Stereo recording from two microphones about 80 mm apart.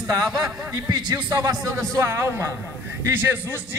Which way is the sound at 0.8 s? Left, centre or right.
Right.